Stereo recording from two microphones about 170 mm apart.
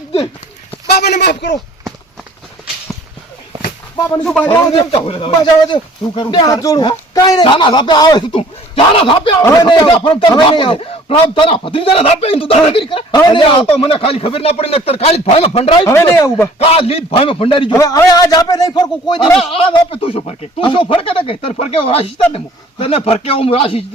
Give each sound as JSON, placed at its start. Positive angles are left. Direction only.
{"t": 1.2, "sound": "speech", "side_deg": 80}
{"t": 4.2, "sound": "a man's voice", "side_deg": 5}
{"t": 4.4, "sound": "speech", "side_deg": 35}
{"t": 9.4, "sound": "a man's voice", "side_deg": 20}
{"t": 15.9, "sound": "speech", "side_deg": 15}
{"t": 16.6, "sound": "a man's voice", "side_deg": 35}
{"t": 17.7, "sound": "a man's voice", "side_deg": 20}